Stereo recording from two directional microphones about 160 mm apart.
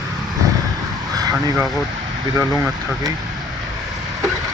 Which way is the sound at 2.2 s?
25° right (ahead or behind).